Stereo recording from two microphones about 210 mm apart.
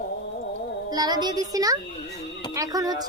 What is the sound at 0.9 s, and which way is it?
A woman's voice, 20° right (ahead or behind).